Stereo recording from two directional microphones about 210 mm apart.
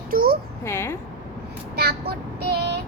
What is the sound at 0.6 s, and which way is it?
Speech, 10° left (ahead or behind).